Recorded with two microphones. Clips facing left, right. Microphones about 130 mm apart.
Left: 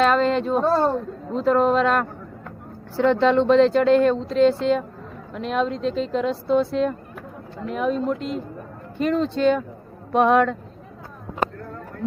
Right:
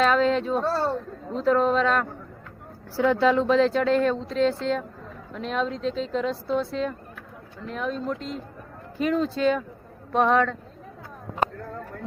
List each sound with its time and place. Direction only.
0.0 s speech: centre (ahead or behind)
0.6 s speech: 15° left (ahead or behind)
1.4 s speech: centre (ahead or behind)